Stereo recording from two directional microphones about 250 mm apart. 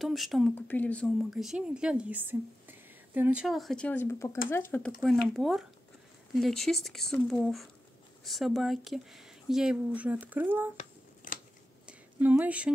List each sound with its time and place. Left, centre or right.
0.0 s speech: centre
11.2 s scissors: left
12.2 s speech: centre